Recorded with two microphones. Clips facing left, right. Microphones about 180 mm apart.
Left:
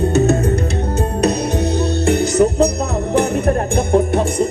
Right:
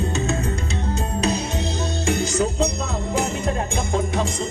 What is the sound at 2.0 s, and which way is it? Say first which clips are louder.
Music: left 7 dB; 65° left (ahead or behind).